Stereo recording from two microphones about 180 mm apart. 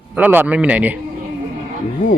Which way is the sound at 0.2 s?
10° right (ahead or behind).